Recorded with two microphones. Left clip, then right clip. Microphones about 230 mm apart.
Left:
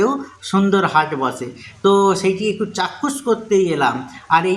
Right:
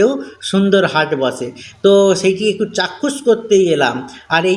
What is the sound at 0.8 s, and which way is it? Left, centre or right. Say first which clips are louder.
Speech: right 1 dB; centre.